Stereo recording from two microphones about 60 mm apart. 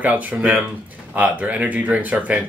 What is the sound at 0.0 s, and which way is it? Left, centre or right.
Speech, right.